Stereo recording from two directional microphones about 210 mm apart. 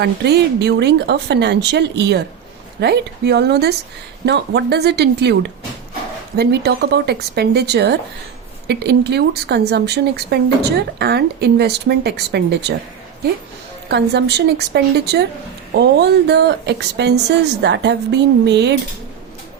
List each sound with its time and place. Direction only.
0.0 s speech: 50° right (ahead or behind)
13.8 s speech: 50° right (ahead or behind)